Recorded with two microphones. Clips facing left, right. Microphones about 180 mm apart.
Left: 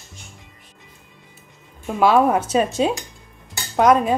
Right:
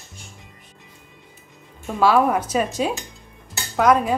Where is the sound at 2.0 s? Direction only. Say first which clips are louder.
Left 2 dB; 25° left (ahead or behind).